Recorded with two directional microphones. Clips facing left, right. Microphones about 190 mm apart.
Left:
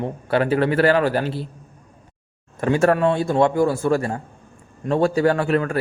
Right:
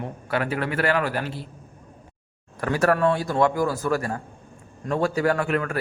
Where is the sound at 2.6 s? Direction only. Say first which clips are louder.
Left 3 dB; 25° left (ahead or behind).